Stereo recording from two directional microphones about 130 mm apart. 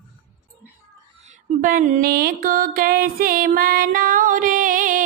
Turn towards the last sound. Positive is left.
turn(degrees=-90)